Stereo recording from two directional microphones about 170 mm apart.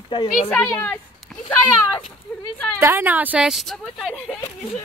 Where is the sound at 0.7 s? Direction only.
15° left (ahead or behind).